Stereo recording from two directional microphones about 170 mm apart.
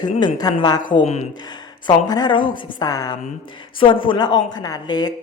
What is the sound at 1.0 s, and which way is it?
Speech, 40° left (ahead or behind).